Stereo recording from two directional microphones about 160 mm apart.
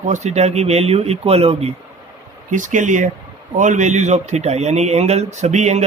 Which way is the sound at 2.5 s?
55° right (ahead or behind).